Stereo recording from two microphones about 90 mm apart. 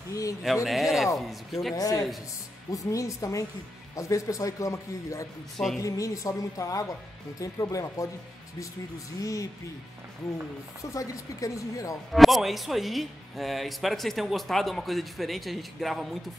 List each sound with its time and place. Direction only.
0.1 s a man's voice: 35° left (ahead or behind)
0.7 s speech: centre (ahead or behind)
1.8 s a man's voice: 45° left (ahead or behind)
9.2 s a man's voice: 40° left (ahead or behind)
10.8 s a man's voice: 40° left (ahead or behind)
12.1 s speech: centre (ahead or behind)